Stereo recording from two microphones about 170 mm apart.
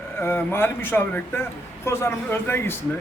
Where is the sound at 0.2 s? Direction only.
15° left (ahead or behind).